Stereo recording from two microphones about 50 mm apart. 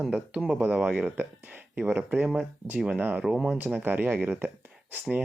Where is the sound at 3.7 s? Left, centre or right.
Right.